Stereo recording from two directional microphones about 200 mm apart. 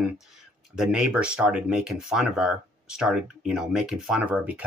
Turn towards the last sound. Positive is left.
turn(degrees=-5)  # may be behind; listen again after turning